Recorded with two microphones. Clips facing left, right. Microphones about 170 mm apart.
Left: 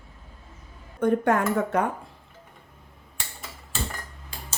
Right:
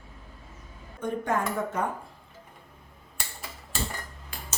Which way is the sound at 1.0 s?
70° left (ahead or behind).